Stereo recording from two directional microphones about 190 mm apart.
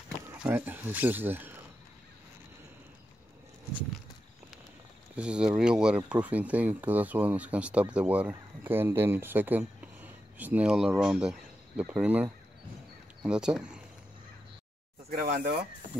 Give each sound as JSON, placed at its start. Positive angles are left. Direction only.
{"t": 0.3, "sound": "speech", "side_deg": -10}
{"t": 5.1, "sound": "speech", "side_deg": -5}
{"t": 15.0, "sound": "speech", "side_deg": -45}